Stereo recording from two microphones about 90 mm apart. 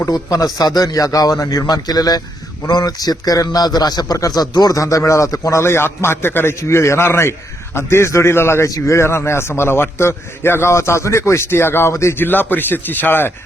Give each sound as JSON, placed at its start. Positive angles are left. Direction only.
{"t": 0.0, "sound": "a man's voice", "side_deg": 40}